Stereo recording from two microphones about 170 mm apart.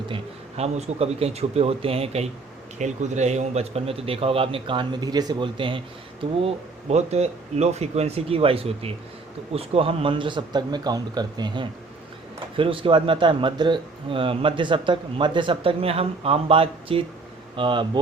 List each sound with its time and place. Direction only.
0.1 s a man's voice: 40° right (ahead or behind)